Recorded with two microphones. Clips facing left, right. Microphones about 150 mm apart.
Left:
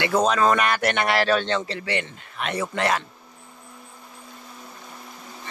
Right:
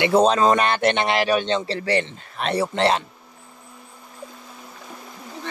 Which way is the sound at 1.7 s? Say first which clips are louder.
Right 6 dB; 35° right (ahead or behind).